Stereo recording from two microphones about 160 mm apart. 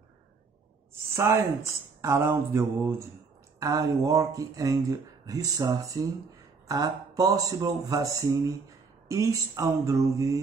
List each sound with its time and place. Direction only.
1.1 s speech: 15° right (ahead or behind)
2.0 s mantra: 15° right (ahead or behind)
3.5 s speech: 20° right (ahead or behind)